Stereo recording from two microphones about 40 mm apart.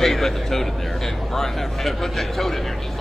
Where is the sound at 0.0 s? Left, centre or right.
Centre.